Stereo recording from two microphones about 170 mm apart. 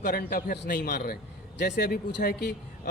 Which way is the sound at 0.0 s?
60° left (ahead or behind).